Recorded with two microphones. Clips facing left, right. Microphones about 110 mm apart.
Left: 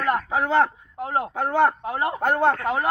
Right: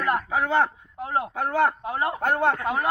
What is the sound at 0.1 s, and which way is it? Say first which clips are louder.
A man's voice: left 2 dB; 25° left (ahead or behind).